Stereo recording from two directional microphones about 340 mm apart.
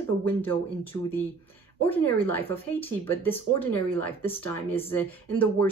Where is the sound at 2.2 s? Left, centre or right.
Centre.